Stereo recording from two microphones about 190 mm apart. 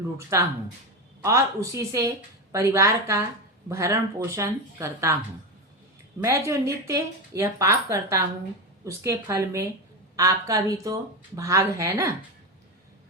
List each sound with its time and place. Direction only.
0.2 s a woman's voice: 15° right (ahead or behind)
6.2 s a woman's voice: 15° right (ahead or behind)